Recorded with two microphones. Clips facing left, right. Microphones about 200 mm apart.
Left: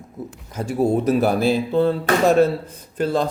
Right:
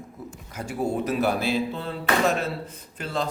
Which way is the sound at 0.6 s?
40° left (ahead or behind).